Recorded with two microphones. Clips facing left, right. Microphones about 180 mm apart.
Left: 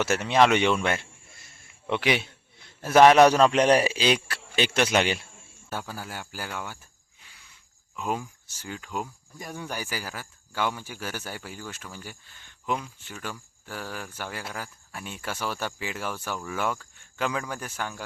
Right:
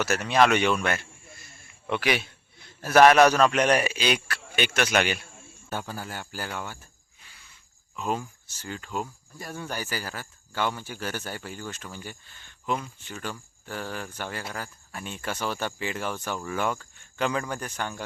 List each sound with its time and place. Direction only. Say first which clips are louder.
0.0 s a man's voice: left 1 dB; 25° left (ahead or behind)
3.5 s a man's voice: left 3 dB; 30° left (ahead or behind)
5.7 s speech: right 1 dB; 5° left (ahead or behind)
7.2 s a sound: right 1 dB; 15° left (ahead or behind)
7.9 s speech: right 1 dB; 10° left (ahead or behind)